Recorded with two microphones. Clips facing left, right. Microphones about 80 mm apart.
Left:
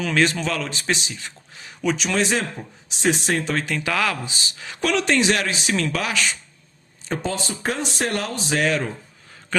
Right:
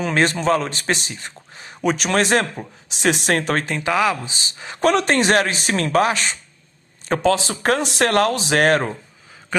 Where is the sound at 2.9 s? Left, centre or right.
Right.